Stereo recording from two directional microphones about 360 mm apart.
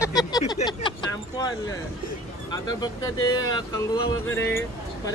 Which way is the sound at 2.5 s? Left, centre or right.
Centre.